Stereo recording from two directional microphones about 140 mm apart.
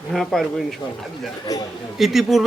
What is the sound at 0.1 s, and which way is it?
Speech, centre (ahead or behind).